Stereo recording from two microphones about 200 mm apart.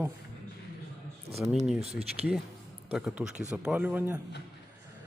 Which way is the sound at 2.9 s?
5° right (ahead or behind).